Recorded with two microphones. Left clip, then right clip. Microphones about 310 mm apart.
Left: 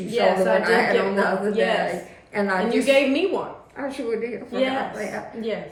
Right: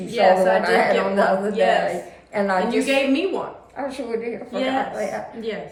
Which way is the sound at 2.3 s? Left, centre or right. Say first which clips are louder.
Right 2 dB; centre.